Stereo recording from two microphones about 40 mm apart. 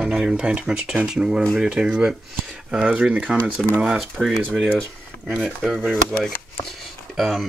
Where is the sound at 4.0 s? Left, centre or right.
Centre.